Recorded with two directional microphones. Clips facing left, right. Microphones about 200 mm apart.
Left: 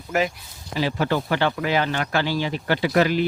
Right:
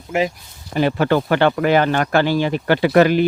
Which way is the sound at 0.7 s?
55° right (ahead or behind).